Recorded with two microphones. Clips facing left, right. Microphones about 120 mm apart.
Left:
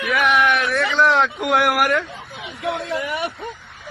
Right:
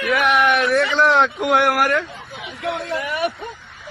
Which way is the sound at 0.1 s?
Centre (ahead or behind).